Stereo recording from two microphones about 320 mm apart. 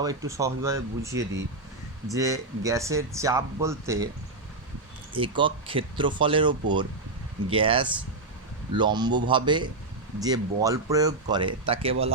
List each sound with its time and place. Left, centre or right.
0.0 s speech: centre
1.2 s speech: right
2.0 s speech: centre
5.1 s speech: centre